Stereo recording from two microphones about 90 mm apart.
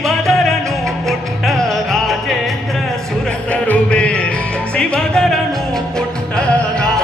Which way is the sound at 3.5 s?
15° left (ahead or behind).